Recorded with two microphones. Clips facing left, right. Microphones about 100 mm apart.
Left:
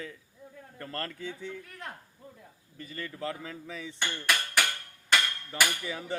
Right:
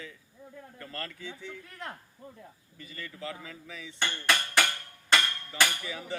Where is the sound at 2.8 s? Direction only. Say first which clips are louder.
Left 4 dB; 40° left (ahead or behind).